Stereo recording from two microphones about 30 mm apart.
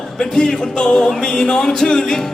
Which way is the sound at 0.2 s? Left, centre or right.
Left.